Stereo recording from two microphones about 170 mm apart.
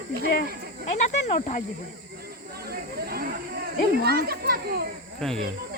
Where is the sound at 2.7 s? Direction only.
65° right (ahead or behind).